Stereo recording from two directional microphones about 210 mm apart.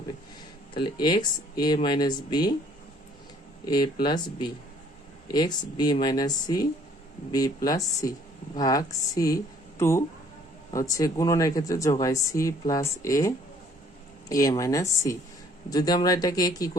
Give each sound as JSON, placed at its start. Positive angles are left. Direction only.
{"t": 0.7, "sound": "speech", "side_deg": 20}
{"t": 4.0, "sound": "speech", "side_deg": 20}